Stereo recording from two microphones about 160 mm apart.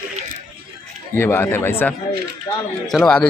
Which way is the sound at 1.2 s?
15° left (ahead or behind).